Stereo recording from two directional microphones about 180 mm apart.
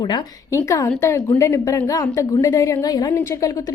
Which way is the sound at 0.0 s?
25° left (ahead or behind).